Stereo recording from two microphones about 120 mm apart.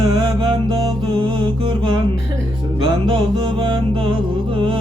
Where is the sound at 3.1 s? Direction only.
40° right (ahead or behind).